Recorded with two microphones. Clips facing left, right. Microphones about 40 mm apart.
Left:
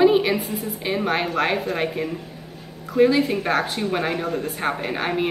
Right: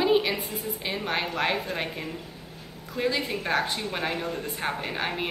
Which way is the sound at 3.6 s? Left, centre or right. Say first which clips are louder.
Left 5 dB; left.